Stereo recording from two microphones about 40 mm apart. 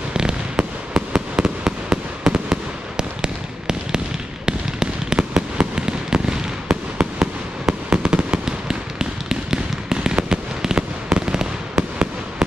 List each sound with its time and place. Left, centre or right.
0.1 s fireworks: centre
0.6 s fireworks: right
2.5 s fireworks: centre
8.5 s fireworks: centre